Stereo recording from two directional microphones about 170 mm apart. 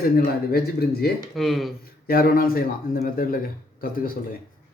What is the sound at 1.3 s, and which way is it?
Speech, centre (ahead or behind).